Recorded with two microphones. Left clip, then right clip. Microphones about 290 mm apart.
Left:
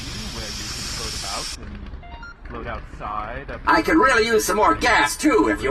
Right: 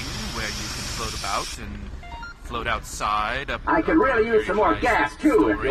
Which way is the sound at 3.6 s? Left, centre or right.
Left.